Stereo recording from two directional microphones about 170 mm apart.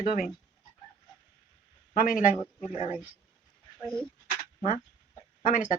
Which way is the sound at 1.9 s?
50° left (ahead or behind).